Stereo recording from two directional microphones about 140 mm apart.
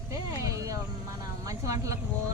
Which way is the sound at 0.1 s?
20° right (ahead or behind).